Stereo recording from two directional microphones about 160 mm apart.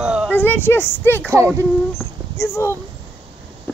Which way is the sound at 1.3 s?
20° right (ahead or behind).